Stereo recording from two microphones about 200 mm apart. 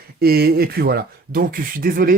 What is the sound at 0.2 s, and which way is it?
Speech, 50° right (ahead or behind).